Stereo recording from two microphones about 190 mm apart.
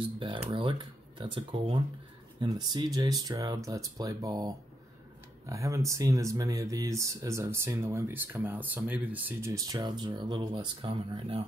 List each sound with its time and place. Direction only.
0.0 s speech: 25° right (ahead or behind)